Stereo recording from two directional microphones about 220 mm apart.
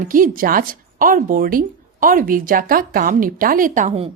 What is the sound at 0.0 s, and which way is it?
A woman's voice, 40° right (ahead or behind).